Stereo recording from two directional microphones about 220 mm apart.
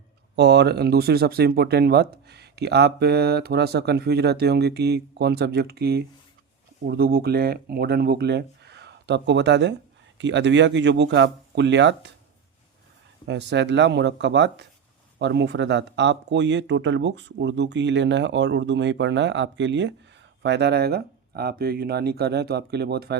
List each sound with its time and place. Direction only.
0.3 s speech: 50° right (ahead or behind)
13.2 s speech: 55° right (ahead or behind)